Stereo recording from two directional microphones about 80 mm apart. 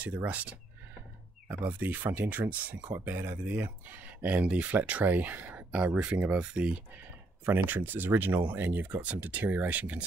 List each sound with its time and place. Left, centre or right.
0.0 s speech: centre
7.4 s speech: right